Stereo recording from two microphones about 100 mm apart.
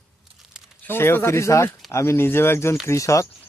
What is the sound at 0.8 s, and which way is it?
Speech, 25° left (ahead or behind).